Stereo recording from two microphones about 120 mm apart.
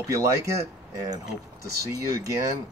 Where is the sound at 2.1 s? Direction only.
25° right (ahead or behind).